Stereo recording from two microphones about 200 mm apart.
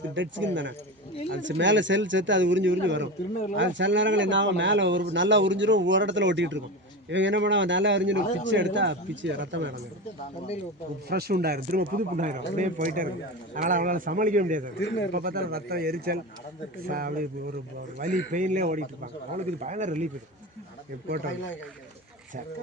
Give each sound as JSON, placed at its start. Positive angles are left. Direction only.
{"t": 0.1, "sound": "speech", "side_deg": -65}
{"t": 11.1, "sound": "a man's voice", "side_deg": -50}
{"t": 14.8, "sound": "speech", "side_deg": 65}
{"t": 15.1, "sound": "a man's voice", "side_deg": -45}